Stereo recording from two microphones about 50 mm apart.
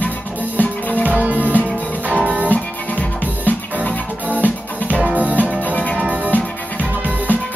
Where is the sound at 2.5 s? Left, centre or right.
Left.